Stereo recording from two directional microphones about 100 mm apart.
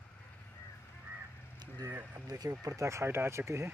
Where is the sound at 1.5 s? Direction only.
40° right (ahead or behind).